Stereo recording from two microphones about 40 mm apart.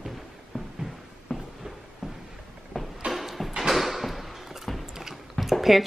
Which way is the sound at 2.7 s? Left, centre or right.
Centre.